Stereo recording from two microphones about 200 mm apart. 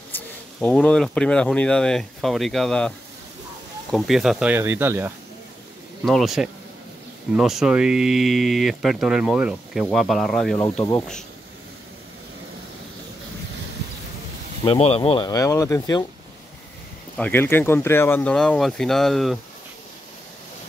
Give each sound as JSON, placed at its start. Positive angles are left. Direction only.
{"t": 0.1, "sound": "speech", "side_deg": 10}
{"t": 3.9, "sound": "speech", "side_deg": 0}
{"t": 6.0, "sound": "speech", "side_deg": 0}
{"t": 14.6, "sound": "speech", "side_deg": 25}
{"t": 17.2, "sound": "speech", "side_deg": 10}